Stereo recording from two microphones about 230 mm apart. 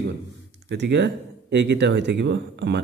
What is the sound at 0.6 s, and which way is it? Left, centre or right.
Speech, right.